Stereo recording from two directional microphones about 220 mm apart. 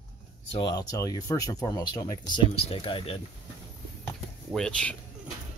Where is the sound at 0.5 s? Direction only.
20° left (ahead or behind).